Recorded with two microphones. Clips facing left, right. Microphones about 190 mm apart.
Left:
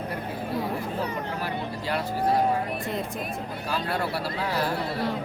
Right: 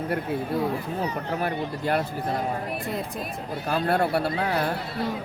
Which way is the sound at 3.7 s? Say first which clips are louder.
Right 6 dB; 55° right (ahead or behind).